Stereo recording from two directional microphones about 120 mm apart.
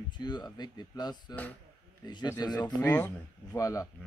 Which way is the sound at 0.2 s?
35° left (ahead or behind).